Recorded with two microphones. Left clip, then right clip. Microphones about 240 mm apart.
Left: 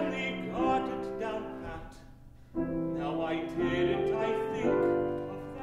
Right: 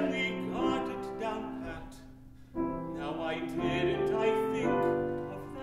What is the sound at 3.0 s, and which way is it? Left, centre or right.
Music, right.